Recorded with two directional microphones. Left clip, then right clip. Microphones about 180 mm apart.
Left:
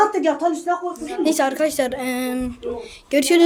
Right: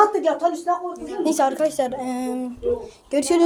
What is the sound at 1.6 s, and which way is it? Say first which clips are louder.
Speech: left 1 dB; 20° left (ahead or behind).